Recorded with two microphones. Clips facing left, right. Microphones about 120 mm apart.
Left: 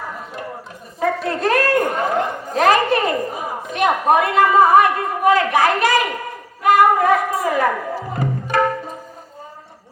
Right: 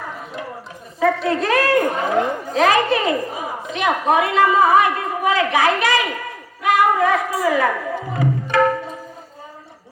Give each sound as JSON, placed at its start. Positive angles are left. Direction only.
{"t": 0.9, "sound": "a sound", "side_deg": 45}
{"t": 2.5, "sound": "a woman's voice", "side_deg": 50}
{"t": 6.6, "sound": "music", "side_deg": 45}